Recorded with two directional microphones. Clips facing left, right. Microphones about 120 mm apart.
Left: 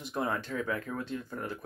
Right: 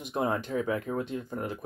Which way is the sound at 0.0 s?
20° right (ahead or behind).